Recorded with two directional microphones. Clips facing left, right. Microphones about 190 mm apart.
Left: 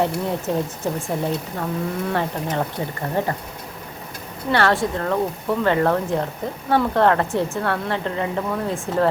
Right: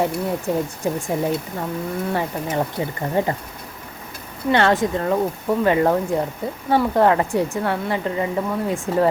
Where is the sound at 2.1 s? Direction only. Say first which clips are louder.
Right 1 dB; 10° right (ahead or behind).